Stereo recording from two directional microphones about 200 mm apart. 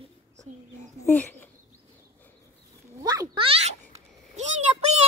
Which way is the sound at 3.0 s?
20° right (ahead or behind).